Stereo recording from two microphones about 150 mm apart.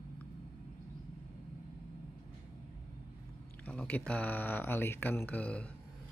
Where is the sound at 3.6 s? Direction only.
10° left (ahead or behind).